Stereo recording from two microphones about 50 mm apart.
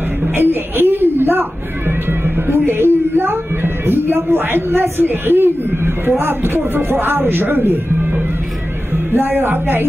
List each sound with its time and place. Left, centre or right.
0.4 s speech: right